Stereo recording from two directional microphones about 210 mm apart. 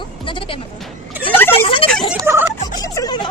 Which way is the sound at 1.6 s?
25° left (ahead or behind).